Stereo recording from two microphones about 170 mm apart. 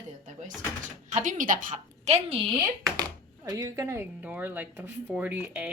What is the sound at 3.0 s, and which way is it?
Speech, 20° right (ahead or behind).